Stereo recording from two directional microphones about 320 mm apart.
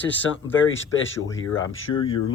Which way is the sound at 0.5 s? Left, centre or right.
Left.